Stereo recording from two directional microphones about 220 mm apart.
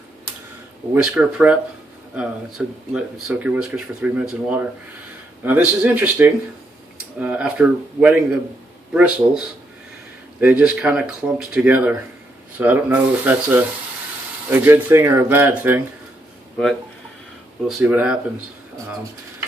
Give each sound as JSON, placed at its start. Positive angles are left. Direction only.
{"t": 0.9, "sound": "speech", "side_deg": -5}
{"t": 17.7, "sound": "speech", "side_deg": -5}